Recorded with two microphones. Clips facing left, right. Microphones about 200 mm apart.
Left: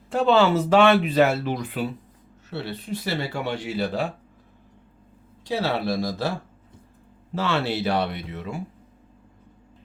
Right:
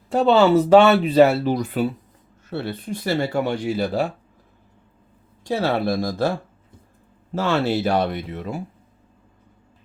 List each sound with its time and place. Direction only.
0.1 s speech: 35° right (ahead or behind)
2.5 s speech: 50° right (ahead or behind)
5.5 s speech: 50° right (ahead or behind)
7.3 s speech: 45° right (ahead or behind)